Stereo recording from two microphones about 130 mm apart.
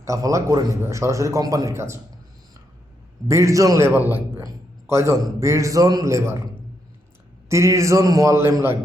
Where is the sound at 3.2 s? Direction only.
20° right (ahead or behind).